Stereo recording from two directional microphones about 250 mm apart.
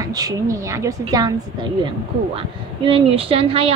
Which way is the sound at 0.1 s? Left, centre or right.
Centre.